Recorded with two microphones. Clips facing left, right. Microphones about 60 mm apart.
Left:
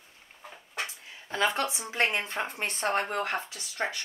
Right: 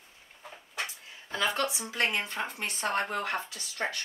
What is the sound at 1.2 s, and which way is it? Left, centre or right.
A woman's voice, left.